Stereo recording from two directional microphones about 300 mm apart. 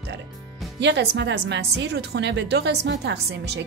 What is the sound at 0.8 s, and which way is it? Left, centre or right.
A woman's voice, right.